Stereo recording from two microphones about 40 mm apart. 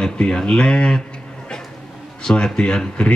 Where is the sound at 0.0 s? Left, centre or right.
Left.